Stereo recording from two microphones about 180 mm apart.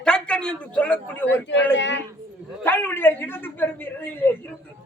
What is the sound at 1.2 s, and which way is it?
Speech, 90° left.